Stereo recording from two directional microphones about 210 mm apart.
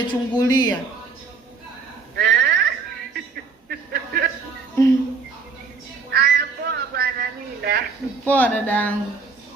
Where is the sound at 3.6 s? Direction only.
50° right (ahead or behind).